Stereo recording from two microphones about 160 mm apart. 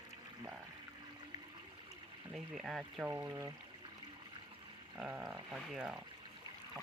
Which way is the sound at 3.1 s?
15° right (ahead or behind).